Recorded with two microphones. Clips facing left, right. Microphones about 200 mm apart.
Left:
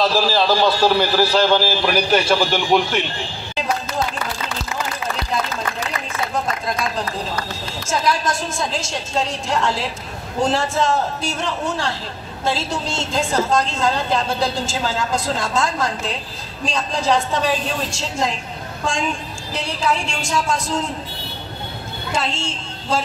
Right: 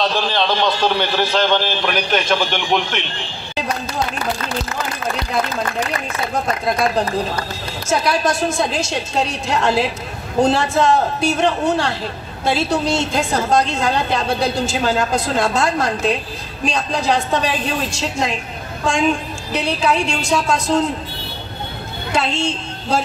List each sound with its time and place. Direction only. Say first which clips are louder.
0.0 s a man's voice: left 2 dB; 5° left (ahead or behind)
6.6 s a man's voice: right 6 dB; 65° right (ahead or behind)
22.1 s a woman's voice: right 5 dB; 65° right (ahead or behind)